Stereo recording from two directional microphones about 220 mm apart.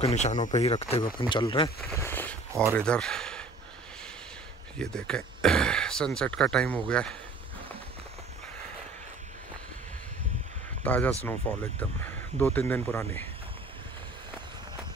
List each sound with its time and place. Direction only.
0.0 s speech: 30° left (ahead or behind)
1.9 s a sound: 10° left (ahead or behind)
2.7 s speech: 5° left (ahead or behind)
4.7 s speech: 5° left (ahead or behind)
10.8 s speech: 10° left (ahead or behind)